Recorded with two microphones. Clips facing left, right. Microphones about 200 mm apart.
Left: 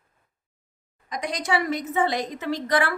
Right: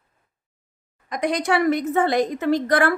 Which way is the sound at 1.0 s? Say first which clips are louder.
Right 6 dB; 55° right (ahead or behind).